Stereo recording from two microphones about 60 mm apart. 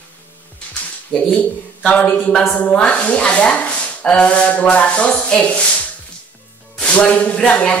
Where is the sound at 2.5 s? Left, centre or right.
Left.